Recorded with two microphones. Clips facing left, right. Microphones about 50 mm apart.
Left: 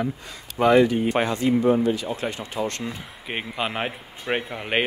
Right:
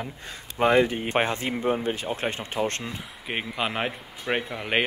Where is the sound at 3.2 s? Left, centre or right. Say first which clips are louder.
Left 1 dB; centre.